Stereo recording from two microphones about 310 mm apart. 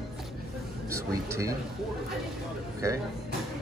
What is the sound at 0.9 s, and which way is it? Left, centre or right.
Speech, centre.